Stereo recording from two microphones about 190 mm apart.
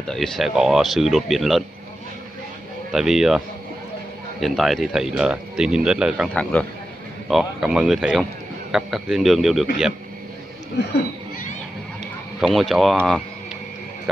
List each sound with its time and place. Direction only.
0.0 s speech: centre (ahead or behind)
2.9 s speech: centre (ahead or behind)
6.2 s speech: 5° left (ahead or behind)
10.8 s speech: 65° left (ahead or behind)
12.4 s speech: centre (ahead or behind)